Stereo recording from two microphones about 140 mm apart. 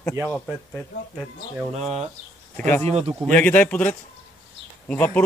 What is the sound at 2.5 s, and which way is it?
Speech, 15° left (ahead or behind).